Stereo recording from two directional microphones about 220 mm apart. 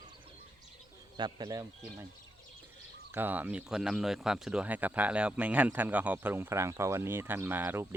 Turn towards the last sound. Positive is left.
turn(degrees=-10)  # may be behind; listen again after turning